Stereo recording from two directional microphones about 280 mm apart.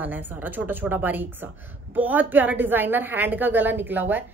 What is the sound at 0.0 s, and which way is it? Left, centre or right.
A woman's voice, centre.